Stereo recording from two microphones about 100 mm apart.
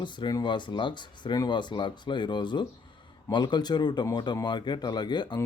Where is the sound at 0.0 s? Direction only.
45° left (ahead or behind).